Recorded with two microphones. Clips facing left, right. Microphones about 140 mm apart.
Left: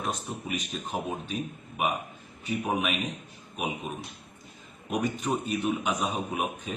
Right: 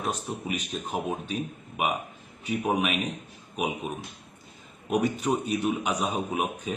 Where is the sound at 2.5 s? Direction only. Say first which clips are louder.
Right 2 dB; centre (ahead or behind).